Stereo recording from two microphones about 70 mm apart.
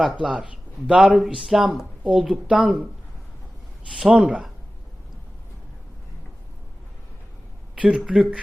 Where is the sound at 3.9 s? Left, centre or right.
Centre.